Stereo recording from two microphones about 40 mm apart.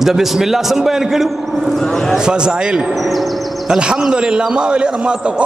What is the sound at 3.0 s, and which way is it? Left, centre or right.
Speech, centre.